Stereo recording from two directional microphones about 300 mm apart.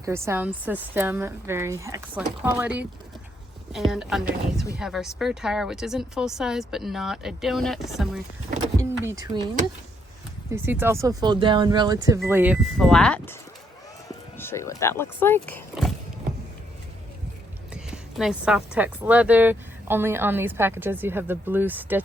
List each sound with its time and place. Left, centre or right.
0.0 s a woman's voice: centre
3.9 s a woman's voice: centre
10.5 s a woman's voice: centre
14.3 s speech: centre
17.7 s a woman's voice: centre